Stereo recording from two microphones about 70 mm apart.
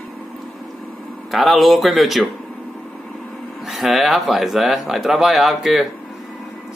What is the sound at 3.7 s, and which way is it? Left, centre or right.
Speech, centre.